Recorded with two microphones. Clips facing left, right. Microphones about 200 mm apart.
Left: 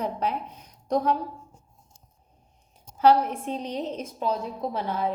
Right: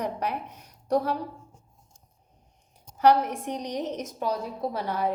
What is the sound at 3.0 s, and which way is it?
A woman's voice, 15° right (ahead or behind).